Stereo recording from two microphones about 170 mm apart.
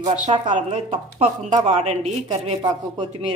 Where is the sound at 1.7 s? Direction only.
40° right (ahead or behind).